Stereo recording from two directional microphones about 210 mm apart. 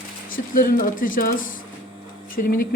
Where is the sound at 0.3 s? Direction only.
40° left (ahead or behind).